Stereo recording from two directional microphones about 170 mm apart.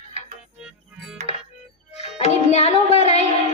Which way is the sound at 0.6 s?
5° right (ahead or behind).